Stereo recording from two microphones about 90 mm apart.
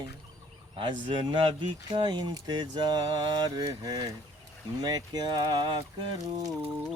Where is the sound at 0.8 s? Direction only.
65° right (ahead or behind).